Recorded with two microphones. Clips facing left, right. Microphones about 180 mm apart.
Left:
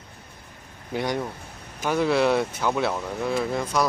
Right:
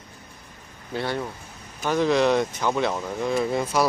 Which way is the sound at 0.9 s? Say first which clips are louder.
Left 1 dB; 15° left (ahead or behind).